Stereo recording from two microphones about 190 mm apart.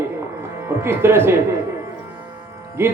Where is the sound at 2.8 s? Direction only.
10° right (ahead or behind).